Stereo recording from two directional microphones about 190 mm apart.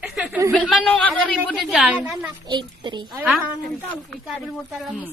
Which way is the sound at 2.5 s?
25° right (ahead or behind).